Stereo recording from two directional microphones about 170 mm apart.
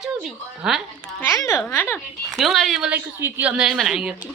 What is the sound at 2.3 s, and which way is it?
A woman's voice, centre (ahead or behind).